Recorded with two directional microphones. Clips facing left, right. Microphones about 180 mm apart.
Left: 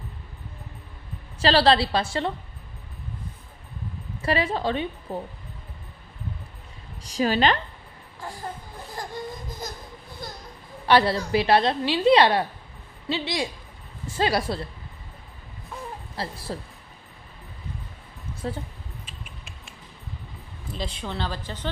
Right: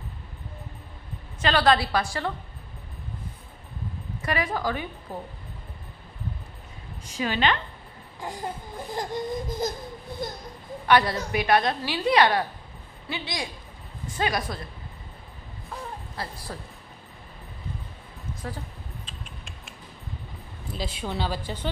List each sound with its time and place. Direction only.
1.4 s a woman's voice: 30° left (ahead or behind)
4.2 s a woman's voice: 30° left (ahead or behind)
7.0 s a woman's voice: 40° left (ahead or behind)
8.2 s a woman's voice: 20° right (ahead or behind)
8.9 s baby cry: 20° right (ahead or behind)
10.9 s a woman's voice: 30° left (ahead or behind)
16.2 s a woman's voice: 30° left (ahead or behind)
18.4 s a woman's voice: 25° left (ahead or behind)
19.0 s creak: 5° left (ahead or behind)
20.7 s a woman's voice: 5° right (ahead or behind)